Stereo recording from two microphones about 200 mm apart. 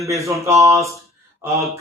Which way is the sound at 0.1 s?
15° right (ahead or behind).